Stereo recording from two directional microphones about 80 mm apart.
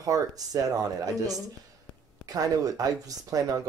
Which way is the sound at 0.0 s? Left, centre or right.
Right.